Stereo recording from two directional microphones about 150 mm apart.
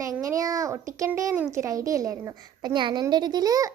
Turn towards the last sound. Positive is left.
turn(degrees=-25)  # may be behind; listen again after turning